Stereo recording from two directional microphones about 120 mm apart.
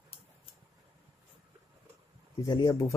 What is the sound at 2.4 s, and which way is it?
Speech, 35° left (ahead or behind).